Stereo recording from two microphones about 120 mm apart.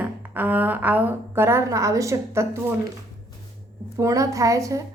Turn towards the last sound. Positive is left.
turn(degrees=-25)  # may be behind; listen again after turning